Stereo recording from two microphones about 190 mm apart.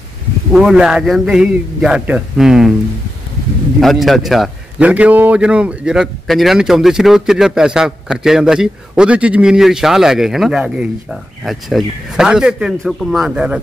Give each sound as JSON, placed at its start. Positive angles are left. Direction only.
{"t": 0.5, "sound": "a man's voice", "side_deg": -5}
{"t": 3.8, "sound": "a man's voice", "side_deg": 0}